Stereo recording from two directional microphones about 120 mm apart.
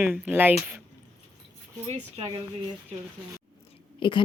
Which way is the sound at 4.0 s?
45° left (ahead or behind).